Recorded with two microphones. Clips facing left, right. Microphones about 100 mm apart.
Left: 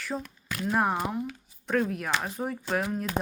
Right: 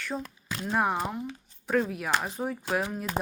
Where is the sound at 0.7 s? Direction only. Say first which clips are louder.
Even; centre (ahead or behind).